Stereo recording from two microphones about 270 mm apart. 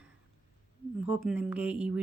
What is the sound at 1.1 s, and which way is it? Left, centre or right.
Speech, centre.